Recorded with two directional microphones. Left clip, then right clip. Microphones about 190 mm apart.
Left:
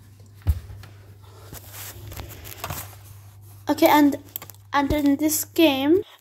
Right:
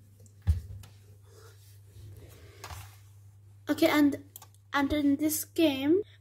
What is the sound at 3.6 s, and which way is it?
A woman's voice, 20° right (ahead or behind).